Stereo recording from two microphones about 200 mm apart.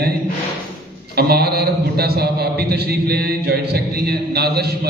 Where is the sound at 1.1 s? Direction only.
50° right (ahead or behind).